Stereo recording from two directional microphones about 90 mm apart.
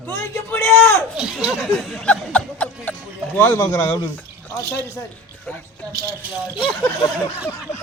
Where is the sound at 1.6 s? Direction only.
5° left (ahead or behind).